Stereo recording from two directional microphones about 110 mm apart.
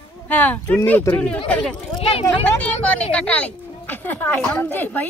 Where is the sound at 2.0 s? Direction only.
65° left (ahead or behind).